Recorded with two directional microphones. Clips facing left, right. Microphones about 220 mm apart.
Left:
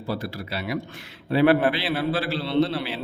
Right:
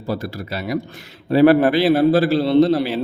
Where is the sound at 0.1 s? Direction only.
45° right (ahead or behind).